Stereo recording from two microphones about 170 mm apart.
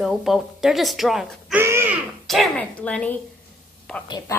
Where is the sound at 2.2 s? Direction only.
Centre (ahead or behind).